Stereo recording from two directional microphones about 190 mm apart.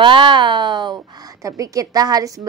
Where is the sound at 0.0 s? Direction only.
25° right (ahead or behind).